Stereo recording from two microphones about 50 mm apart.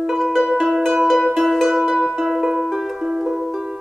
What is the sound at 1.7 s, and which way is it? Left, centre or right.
Music, centre.